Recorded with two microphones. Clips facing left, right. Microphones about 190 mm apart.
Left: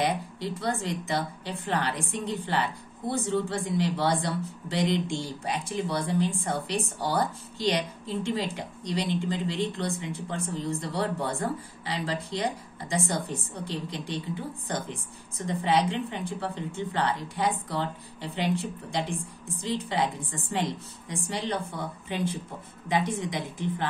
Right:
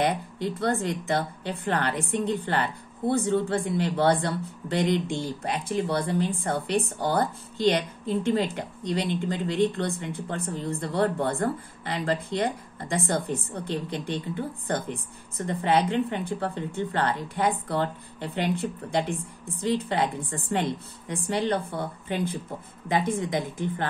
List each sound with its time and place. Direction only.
0.0 s a woman's voice: 55° right (ahead or behind)